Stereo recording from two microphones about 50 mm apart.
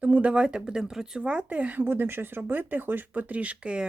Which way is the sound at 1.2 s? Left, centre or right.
Right.